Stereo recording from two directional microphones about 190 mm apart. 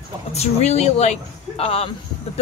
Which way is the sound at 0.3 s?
35° left (ahead or behind).